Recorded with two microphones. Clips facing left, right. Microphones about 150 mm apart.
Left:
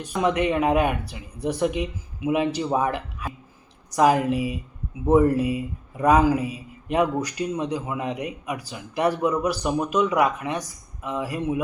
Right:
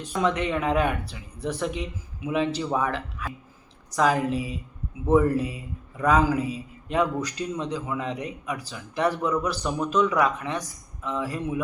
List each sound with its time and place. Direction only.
0.1 s a man's voice: 20° left (ahead or behind)